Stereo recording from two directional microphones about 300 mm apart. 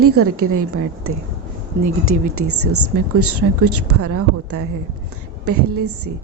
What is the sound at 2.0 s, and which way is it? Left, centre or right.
Speech, right.